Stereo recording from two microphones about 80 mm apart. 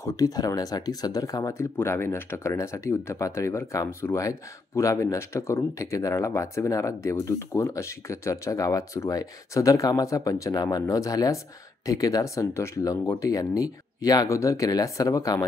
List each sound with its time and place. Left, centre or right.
0.0 s speech: left
1.5 s speech: left
12.5 s speech: left